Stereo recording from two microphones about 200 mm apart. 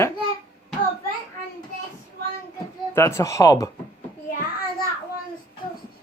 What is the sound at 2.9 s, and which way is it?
Speech, 15° left (ahead or behind).